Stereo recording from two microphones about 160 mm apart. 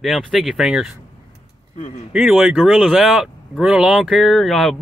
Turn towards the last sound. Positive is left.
turn(degrees=0)  # may be behind; listen again after turning